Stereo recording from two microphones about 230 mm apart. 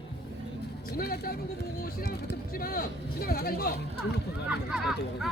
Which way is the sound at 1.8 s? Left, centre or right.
Left.